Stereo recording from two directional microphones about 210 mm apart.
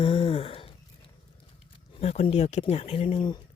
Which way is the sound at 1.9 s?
30° left (ahead or behind).